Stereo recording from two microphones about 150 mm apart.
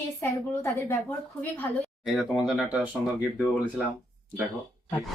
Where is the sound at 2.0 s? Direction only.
Centre (ahead or behind).